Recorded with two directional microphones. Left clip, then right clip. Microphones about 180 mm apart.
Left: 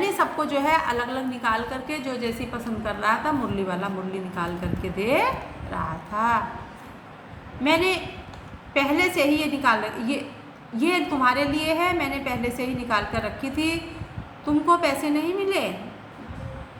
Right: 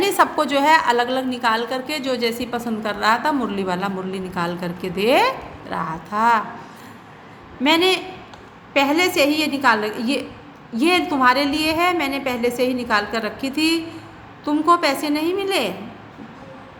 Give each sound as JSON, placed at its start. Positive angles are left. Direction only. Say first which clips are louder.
{"t": 0.0, "sound": "a woman's voice", "louder": "right 6 dB", "side_deg": -50}
{"t": 7.6, "sound": "a woman's voice", "louder": "right 5 dB", "side_deg": -40}